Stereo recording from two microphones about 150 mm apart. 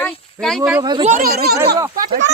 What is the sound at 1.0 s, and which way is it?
Speech, 50° right (ahead or behind).